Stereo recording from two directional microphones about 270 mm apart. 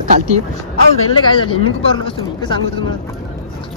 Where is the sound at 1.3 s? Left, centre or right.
Centre.